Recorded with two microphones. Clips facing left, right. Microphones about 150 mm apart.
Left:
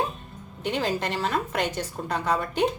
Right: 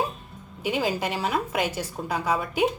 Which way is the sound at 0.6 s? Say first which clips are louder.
Right 1 dB; 5° right (ahead or behind).